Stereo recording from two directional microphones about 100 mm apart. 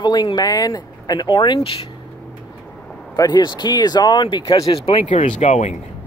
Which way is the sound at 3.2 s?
45° left (ahead or behind).